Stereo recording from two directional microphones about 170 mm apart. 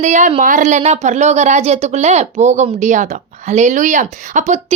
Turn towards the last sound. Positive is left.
turn(degrees=-45)  # may be behind; listen again after turning